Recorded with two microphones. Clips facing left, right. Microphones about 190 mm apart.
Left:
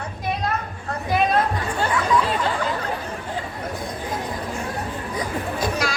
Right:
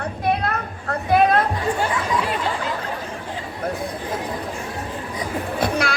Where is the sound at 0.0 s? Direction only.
60° right (ahead or behind).